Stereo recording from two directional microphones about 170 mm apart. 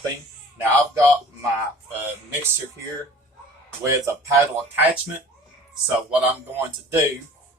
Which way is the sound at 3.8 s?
15° right (ahead or behind).